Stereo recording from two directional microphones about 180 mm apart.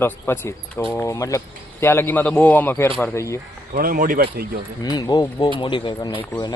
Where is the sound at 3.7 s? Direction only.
50° right (ahead or behind).